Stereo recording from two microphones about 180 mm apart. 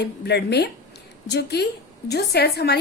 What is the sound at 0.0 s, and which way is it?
A woman's voice, 65° left (ahead or behind).